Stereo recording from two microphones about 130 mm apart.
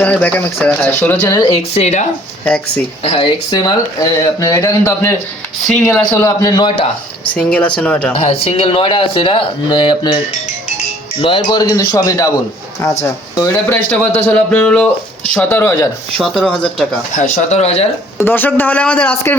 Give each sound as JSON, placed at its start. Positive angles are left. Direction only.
{"t": 0.0, "sound": "speech", "side_deg": 10}
{"t": 1.4, "sound": "speech", "side_deg": 35}
{"t": 1.7, "sound": "speech", "side_deg": 60}
{"t": 2.4, "sound": "speech", "side_deg": 10}
{"t": 3.0, "sound": "speech", "side_deg": 50}
{"t": 3.5, "sound": "speech", "side_deg": 30}
{"t": 6.1, "sound": "speech", "side_deg": 25}
{"t": 7.3, "sound": "speech", "side_deg": 10}
{"t": 8.1, "sound": "speech", "side_deg": 50}
{"t": 11.2, "sound": "speech", "side_deg": 40}
{"t": 14.2, "sound": "speech", "side_deg": 10}
{"t": 16.1, "sound": "speech", "side_deg": 0}
{"t": 17.2, "sound": "speech", "side_deg": 60}
{"t": 18.2, "sound": "speech", "side_deg": 15}